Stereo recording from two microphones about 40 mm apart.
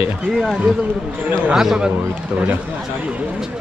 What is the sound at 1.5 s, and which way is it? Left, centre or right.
Speech, centre.